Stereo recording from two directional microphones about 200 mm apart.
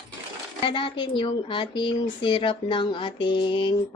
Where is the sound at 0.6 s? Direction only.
25° left (ahead or behind).